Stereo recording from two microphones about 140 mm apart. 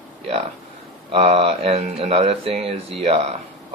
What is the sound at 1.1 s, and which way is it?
Speech, 40° right (ahead or behind).